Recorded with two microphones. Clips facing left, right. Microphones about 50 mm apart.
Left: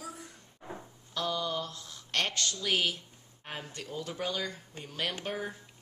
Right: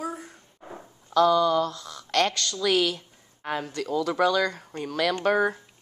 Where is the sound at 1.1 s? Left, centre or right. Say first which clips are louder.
Right 13 dB; right.